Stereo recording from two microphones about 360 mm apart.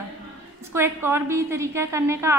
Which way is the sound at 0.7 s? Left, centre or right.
Centre.